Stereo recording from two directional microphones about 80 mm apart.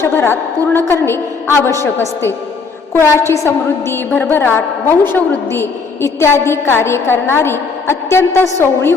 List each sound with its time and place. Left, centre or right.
0.0 s a woman's voice: left